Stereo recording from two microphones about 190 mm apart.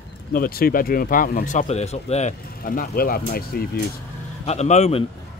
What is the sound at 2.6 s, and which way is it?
Speech, 50° left (ahead or behind).